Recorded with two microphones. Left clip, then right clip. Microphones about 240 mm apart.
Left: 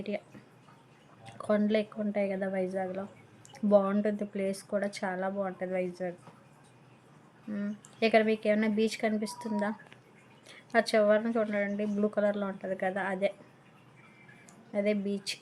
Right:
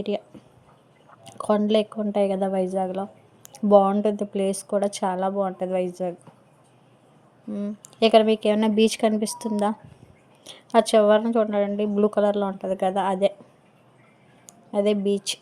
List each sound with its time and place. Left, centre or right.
1.2 s speech: right
7.5 s speech: centre
14.4 s speech: right